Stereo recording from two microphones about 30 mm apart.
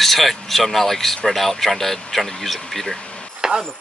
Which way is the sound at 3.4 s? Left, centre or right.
Right.